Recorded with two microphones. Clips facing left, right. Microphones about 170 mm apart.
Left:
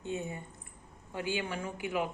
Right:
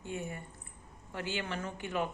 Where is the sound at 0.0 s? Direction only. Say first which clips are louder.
Left 3 dB; 20° left (ahead or behind).